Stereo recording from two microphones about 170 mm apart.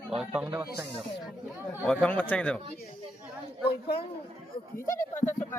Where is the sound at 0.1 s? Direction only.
5° right (ahead or behind).